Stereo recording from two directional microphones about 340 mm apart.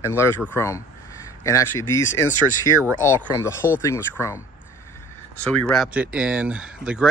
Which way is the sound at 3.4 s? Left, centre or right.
Centre.